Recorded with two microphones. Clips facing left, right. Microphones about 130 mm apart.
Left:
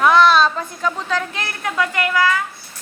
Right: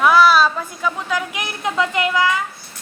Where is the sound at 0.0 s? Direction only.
5° right (ahead or behind).